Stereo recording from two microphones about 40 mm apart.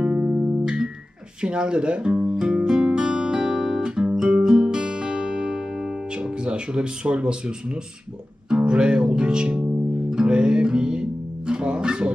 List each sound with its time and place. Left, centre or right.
0.0 s music: right
1.4 s speech: right
2.3 s guitar: centre
4.6 s music: centre